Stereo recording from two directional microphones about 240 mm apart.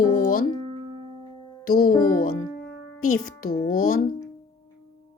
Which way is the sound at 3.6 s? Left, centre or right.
Left.